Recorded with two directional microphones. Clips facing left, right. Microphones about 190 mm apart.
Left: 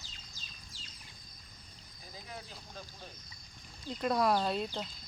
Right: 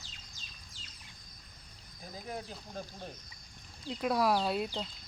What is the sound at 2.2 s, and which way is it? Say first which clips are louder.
Speech: right 7 dB; 45° right (ahead or behind).